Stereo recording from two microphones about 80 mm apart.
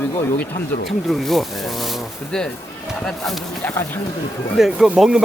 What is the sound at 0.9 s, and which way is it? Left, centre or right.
Speech, centre.